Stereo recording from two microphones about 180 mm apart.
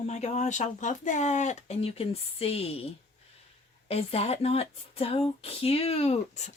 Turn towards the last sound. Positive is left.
turn(degrees=35)  # may be behind; listen again after turning